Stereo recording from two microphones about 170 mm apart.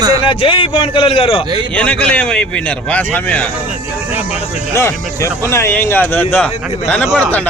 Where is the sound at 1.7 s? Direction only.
10° left (ahead or behind).